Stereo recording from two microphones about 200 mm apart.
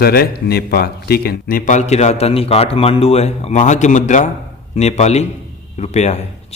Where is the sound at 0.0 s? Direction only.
50° left (ahead or behind).